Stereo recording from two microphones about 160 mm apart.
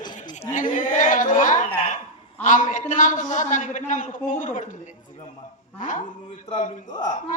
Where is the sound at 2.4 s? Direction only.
50° left (ahead or behind).